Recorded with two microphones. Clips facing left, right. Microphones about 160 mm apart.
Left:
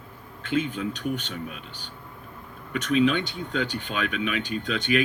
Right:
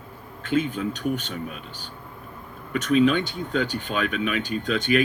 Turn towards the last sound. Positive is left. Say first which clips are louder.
# right 3 dB
turn(degrees=-45)  # may be behind; listen again after turning